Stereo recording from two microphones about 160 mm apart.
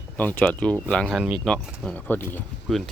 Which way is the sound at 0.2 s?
10° left (ahead or behind).